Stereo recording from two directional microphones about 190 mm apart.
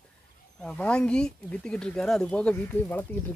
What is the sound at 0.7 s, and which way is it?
Speech, 5° left (ahead or behind).